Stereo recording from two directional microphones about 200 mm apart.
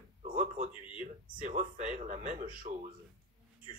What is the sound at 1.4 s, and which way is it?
Speech, 35° right (ahead or behind).